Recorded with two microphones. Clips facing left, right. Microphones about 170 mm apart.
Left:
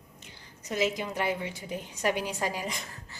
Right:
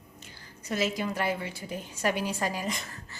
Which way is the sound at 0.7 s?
20° left (ahead or behind).